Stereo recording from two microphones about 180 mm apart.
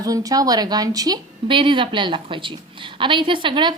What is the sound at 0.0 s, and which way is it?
Speech, 20° right (ahead or behind).